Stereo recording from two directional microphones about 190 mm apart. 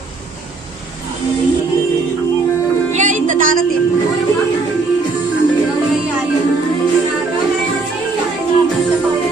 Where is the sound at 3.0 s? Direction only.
40° right (ahead or behind).